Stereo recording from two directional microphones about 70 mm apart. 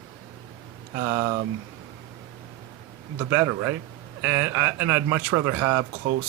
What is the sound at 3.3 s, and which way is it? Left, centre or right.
Speech, right.